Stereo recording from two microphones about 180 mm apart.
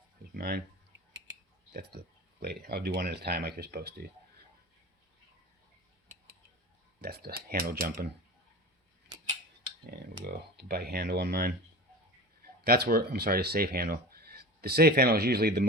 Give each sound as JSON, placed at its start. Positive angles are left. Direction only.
{"t": 0.3, "sound": "speech", "side_deg": -60}
{"t": 1.1, "sound": "clicking", "side_deg": -75}
{"t": 2.4, "sound": "speech", "side_deg": -60}
{"t": 7.0, "sound": "speech", "side_deg": -60}
{"t": 10.2, "sound": "speech", "side_deg": -60}
{"t": 12.6, "sound": "speech", "side_deg": -60}